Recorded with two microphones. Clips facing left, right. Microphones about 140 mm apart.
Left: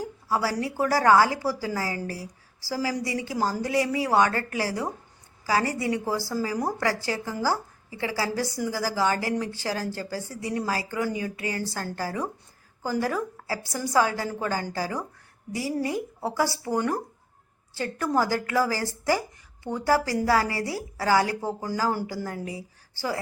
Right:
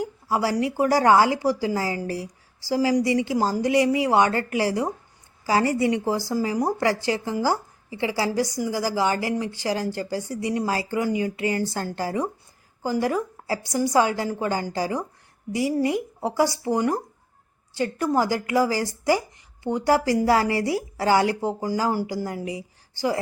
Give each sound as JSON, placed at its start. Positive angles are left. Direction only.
{"t": 0.3, "sound": "a woman's voice", "side_deg": -20}